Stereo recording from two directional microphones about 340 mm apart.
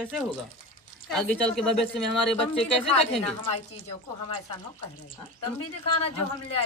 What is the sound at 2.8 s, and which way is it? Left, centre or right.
Speech, centre.